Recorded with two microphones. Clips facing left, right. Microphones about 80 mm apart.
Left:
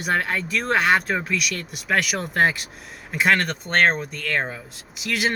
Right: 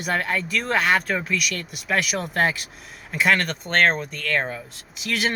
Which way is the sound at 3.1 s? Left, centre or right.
Left.